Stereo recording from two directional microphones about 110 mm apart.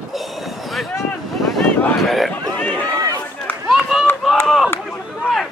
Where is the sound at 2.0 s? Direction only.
Centre (ahead or behind).